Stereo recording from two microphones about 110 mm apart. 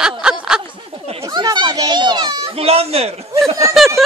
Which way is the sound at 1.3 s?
40° right (ahead or behind).